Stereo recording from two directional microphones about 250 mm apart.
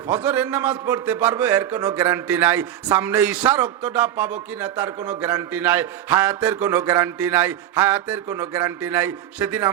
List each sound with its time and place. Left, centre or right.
0.1 s a man's voice: centre